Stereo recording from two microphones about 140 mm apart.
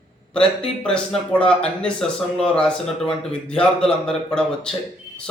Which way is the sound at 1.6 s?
5° left (ahead or behind).